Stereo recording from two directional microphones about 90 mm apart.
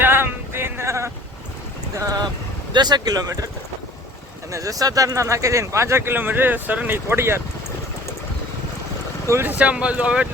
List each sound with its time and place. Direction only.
0.0 s male singing: 25° right (ahead or behind)
2.0 s speech: 45° right (ahead or behind)
4.5 s speech: 40° right (ahead or behind)
9.3 s speech: 20° right (ahead or behind)